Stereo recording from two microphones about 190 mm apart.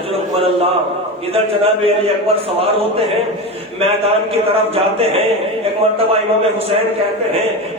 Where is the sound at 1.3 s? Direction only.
30° right (ahead or behind).